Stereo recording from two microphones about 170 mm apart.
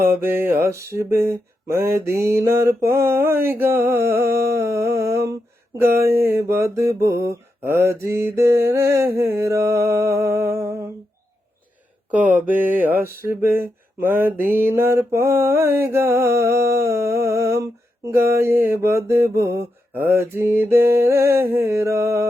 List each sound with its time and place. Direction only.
0.0 s mantra: 15° right (ahead or behind)
5.9 s a sound: 65° right (ahead or behind)
6.1 s mantra: 15° right (ahead or behind)
12.1 s mantra: 10° right (ahead or behind)